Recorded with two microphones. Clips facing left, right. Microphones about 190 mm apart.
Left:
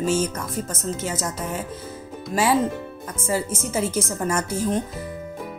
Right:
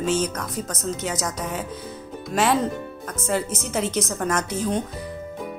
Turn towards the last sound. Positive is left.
turn(degrees=0)  # may be behind; listen again after turning